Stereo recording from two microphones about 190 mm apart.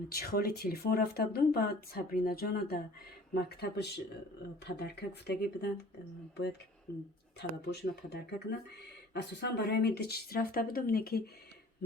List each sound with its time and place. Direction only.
0.1 s speech: 55° left (ahead or behind)
7.3 s speech: 65° left (ahead or behind)